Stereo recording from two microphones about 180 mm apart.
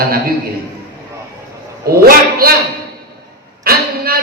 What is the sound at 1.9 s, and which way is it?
Speech, 55° right (ahead or behind).